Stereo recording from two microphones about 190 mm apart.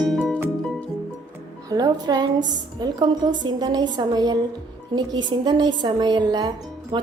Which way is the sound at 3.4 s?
20° right (ahead or behind).